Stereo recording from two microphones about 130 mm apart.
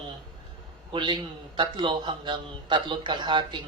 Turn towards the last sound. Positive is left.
turn(degrees=-35)  # may be behind; listen again after turning